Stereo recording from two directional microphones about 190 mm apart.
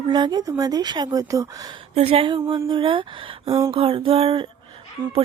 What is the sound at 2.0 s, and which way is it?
Speech, 30° right (ahead or behind).